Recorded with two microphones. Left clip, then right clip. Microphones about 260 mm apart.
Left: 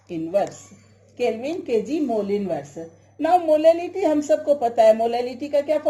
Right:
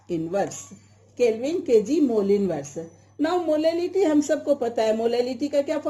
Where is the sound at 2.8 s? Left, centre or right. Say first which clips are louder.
Right 1 dB; right.